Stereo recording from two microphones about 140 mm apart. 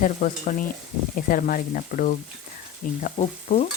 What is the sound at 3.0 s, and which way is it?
Speech, 60° left (ahead or behind).